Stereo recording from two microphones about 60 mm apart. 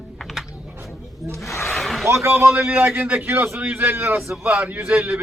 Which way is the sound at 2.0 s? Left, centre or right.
Right.